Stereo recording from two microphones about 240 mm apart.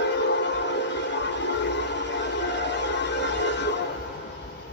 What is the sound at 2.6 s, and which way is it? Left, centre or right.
Music, left.